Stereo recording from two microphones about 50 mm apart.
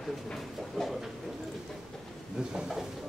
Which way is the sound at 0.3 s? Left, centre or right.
Centre.